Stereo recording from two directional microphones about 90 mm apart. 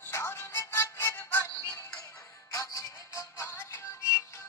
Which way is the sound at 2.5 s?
35° left (ahead or behind).